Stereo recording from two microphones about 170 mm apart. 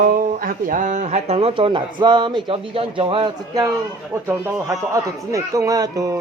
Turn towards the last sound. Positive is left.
turn(degrees=-20)  # may be behind; listen again after turning